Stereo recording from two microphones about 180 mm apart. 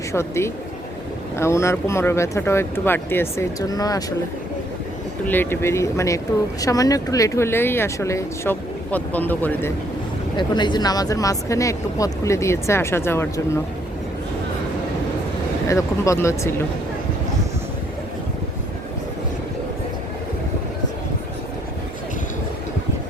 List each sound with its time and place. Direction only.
0.1 s speech: 15° left (ahead or behind)
5.2 s speech: 10° left (ahead or behind)
10.3 s speech: 25° left (ahead or behind)
15.6 s speech: 15° left (ahead or behind)